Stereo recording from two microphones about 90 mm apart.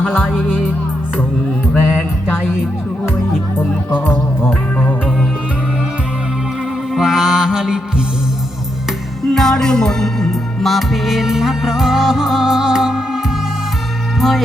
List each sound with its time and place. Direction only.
0.1 s speech: centre (ahead or behind)
1.8 s music: 5° right (ahead or behind)
3.9 s music: 20° left (ahead or behind)
6.9 s music: 5° right (ahead or behind)
9.3 s music: 5° left (ahead or behind)
14.2 s music: centre (ahead or behind)